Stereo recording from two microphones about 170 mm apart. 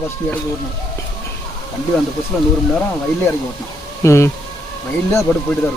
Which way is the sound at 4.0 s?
15° left (ahead or behind).